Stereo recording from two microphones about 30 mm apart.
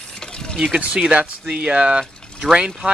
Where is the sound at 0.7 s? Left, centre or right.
Right.